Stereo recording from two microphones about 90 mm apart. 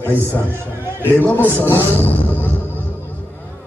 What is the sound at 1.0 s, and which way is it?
Speech, 20° left (ahead or behind).